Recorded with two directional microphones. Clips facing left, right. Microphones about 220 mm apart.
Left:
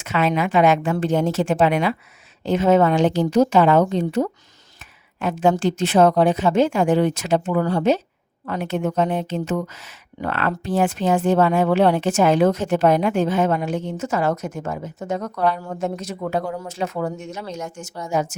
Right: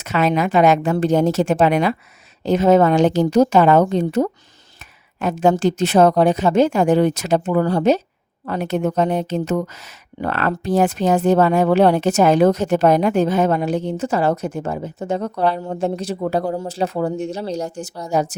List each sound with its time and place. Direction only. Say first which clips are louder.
0.0 s a woman's voice: right 2 dB; 40° right (ahead or behind)